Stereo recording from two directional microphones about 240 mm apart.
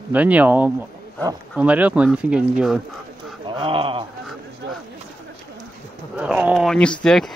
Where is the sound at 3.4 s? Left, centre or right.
Right.